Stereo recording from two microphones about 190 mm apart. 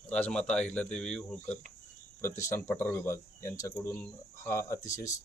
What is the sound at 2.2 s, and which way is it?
Speech, 15° left (ahead or behind).